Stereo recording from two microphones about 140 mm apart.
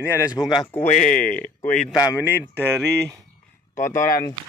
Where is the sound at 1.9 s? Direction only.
25° left (ahead or behind).